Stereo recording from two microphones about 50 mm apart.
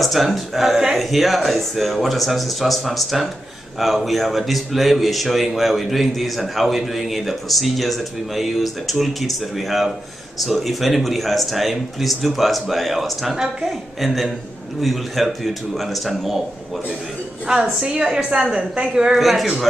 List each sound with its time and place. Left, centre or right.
0.0 s speech: centre
17.5 s a woman's voice: centre
19.1 s speech: centre